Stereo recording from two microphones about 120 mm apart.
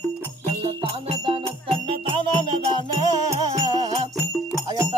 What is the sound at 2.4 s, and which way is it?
Music, 40° right (ahead or behind).